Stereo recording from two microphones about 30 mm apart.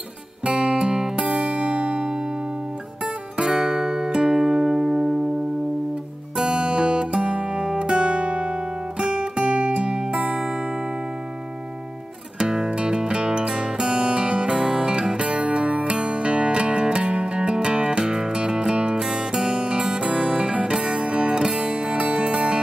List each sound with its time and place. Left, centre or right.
0.5 s music: right
0.9 s music: centre
1.3 s music: right
3.3 s music: right
6.3 s music: right
7.6 s guitar: right
9.0 s music: right
12.4 s music: right
15.1 s music: right
20.0 s music: right
21.3 s music: right